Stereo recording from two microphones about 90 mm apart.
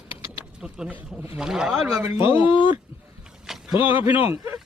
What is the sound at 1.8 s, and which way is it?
Speech, 30° right (ahead or behind).